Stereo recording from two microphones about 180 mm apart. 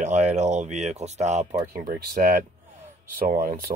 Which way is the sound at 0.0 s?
40° right (ahead or behind).